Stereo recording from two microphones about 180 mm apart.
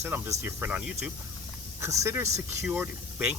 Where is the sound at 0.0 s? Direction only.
10° right (ahead or behind).